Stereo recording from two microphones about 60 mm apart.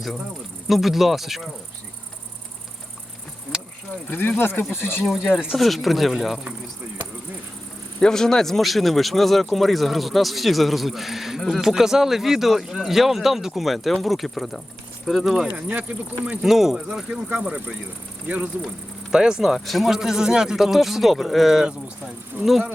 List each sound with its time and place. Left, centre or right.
0.7 s speech: centre
4.1 s speech: left
5.0 s speech: centre
8.0 s speech: centre
15.5 s speech: right
16.4 s speech: centre
17.4 s speech: right
19.1 s speech: centre